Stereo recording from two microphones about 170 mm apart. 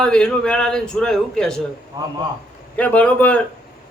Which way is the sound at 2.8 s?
10° left (ahead or behind).